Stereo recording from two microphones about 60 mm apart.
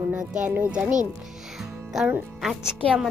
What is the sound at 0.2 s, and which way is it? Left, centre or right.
Speech, centre.